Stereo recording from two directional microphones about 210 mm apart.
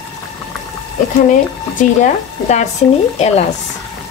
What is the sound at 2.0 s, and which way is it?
Speech, 35° left (ahead or behind).